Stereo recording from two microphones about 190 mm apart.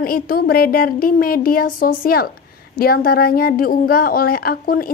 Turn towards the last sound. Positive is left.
turn(degrees=50)  # may be behind; listen again after turning